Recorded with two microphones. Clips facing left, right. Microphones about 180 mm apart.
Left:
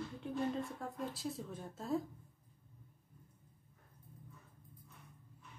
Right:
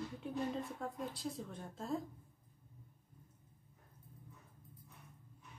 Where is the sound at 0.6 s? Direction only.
Centre (ahead or behind).